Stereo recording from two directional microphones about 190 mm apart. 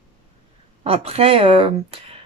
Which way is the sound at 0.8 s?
30° right (ahead or behind).